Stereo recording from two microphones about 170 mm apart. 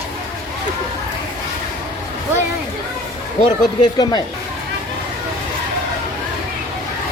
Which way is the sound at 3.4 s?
25° left (ahead or behind).